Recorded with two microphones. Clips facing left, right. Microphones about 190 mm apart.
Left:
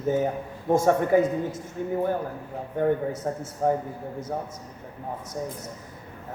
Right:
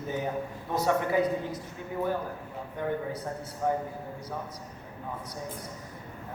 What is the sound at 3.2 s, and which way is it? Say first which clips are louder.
Speech: left 6 dB; 45° left (ahead or behind).